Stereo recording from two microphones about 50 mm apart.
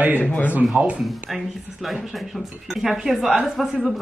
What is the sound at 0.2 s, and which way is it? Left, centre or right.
Speech, left.